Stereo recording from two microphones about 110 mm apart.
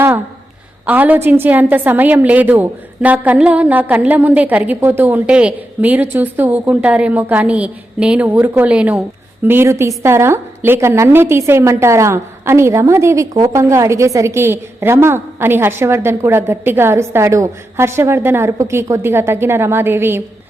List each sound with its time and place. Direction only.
0.9 s a woman's voice: 15° right (ahead or behind)
9.5 s a woman's voice: 20° right (ahead or behind)